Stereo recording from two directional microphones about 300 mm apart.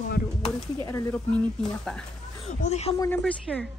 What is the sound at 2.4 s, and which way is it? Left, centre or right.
Speech, left.